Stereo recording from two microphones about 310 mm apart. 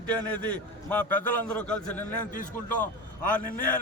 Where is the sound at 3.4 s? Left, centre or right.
Left.